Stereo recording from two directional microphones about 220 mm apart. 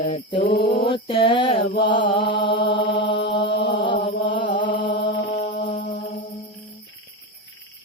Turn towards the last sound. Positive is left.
turn(degrees=45)  # may be behind; listen again after turning